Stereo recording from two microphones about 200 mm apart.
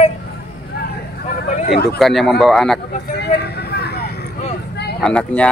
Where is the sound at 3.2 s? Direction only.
55° left (ahead or behind).